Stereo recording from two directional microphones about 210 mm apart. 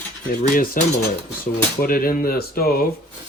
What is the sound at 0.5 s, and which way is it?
Speech, 40° left (ahead or behind).